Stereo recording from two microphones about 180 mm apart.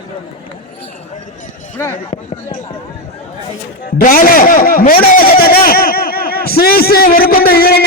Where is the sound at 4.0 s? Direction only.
55° left (ahead or behind).